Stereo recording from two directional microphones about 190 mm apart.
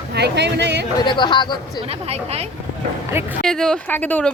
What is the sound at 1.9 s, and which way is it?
Speech, 35° right (ahead or behind).